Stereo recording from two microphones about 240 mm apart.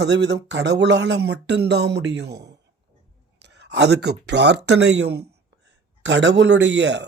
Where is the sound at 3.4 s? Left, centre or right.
Right.